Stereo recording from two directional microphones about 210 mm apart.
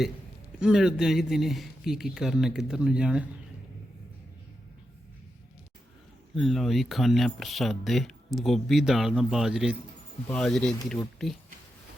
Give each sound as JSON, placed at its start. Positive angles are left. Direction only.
{"t": 0.6, "sound": "speech", "side_deg": -5}
{"t": 6.3, "sound": "speech", "side_deg": 0}